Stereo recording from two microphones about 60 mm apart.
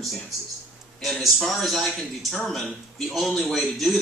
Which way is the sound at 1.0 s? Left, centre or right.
Centre.